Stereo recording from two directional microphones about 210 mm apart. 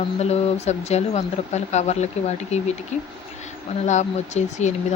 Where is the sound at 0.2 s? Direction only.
30° left (ahead or behind).